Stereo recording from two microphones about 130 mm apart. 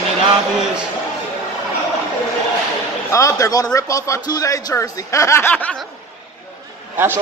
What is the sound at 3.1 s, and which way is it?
Speech, 25° left (ahead or behind).